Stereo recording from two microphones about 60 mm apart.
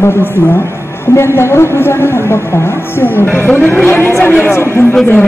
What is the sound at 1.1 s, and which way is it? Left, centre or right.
Speech, left.